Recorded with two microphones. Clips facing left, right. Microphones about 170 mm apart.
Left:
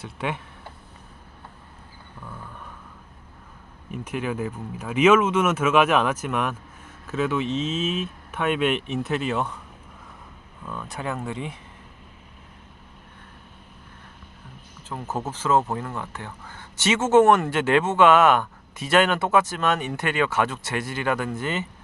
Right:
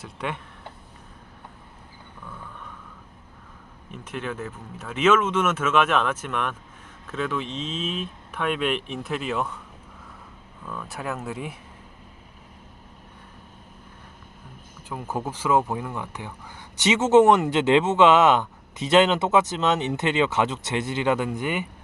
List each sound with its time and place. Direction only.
0.0 s speech: 5° left (ahead or behind)
3.9 s speech: 10° left (ahead or behind)
10.7 s speech: centre (ahead or behind)
14.8 s speech: 10° right (ahead or behind)